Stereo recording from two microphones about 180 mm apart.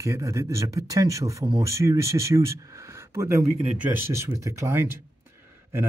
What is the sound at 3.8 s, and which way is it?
Speech, 15° right (ahead or behind).